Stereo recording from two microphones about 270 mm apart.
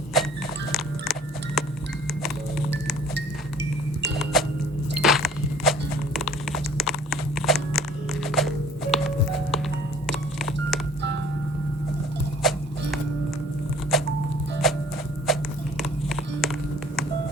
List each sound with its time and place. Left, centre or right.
0.1 s livestock: centre
1.6 s a sound: centre
3.2 s wind chime: right
4.2 s music: centre
4.9 s a sound: centre
6.1 s crunch: centre
7.8 s music: centre
10.1 s telephone dialing: centre
12.4 s music: centre
13.9 s music: centre
15.3 s a sound: centre
15.8 s music: centre